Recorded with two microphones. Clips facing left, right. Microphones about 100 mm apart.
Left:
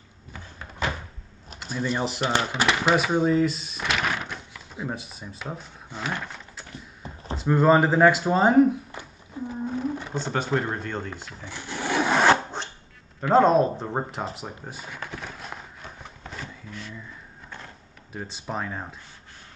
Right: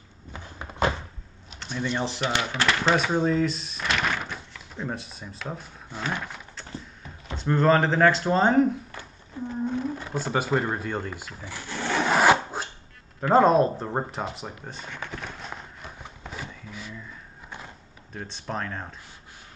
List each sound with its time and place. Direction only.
1.6 s speech: 5° left (ahead or behind)
7.3 s speech: 10° left (ahead or behind)
9.0 s a sound: 15° left (ahead or behind)
9.5 s roaring cats: 5° left (ahead or behind)
10.1 s speech: 5° right (ahead or behind)
11.4 s sewing machine: 20° left (ahead or behind)
12.1 s filing: 5° right (ahead or behind)
13.2 s speech: centre (ahead or behind)
14.3 s a sound: 5° left (ahead or behind)
18.1 s speech: 5° left (ahead or behind)